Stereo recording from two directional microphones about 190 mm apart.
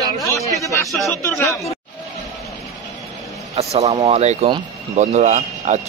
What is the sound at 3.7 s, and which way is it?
Speech, 35° right (ahead or behind).